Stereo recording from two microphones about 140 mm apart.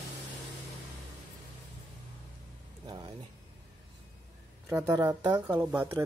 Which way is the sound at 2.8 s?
30° right (ahead or behind).